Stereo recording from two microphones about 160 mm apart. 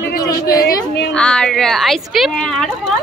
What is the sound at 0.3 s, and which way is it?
Speech, 20° left (ahead or behind).